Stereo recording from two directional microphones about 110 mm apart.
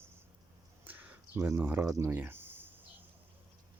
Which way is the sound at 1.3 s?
25° right (ahead or behind).